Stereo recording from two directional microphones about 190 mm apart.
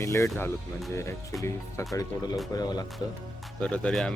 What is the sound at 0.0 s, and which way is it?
Speech, 15° left (ahead or behind).